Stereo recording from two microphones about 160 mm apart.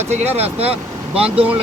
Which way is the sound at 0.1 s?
45° right (ahead or behind).